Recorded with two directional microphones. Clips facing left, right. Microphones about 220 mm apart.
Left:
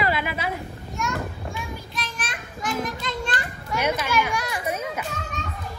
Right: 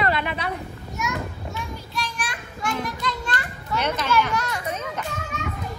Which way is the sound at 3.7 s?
10° left (ahead or behind).